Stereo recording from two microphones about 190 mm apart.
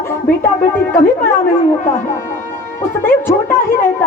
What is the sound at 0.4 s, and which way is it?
Speech, 10° left (ahead or behind).